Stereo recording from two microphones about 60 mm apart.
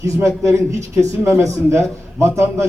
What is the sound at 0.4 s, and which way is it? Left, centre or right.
A man's voice, right.